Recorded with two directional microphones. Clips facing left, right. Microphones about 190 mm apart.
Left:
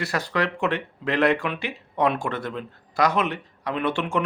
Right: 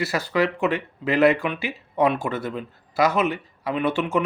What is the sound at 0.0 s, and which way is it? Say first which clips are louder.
Speech: right 3 dB; centre (ahead or behind).